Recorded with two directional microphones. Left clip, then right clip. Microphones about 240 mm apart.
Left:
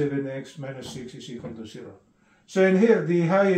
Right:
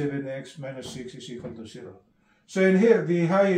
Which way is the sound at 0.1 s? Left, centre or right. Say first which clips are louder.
Left 2 dB; centre.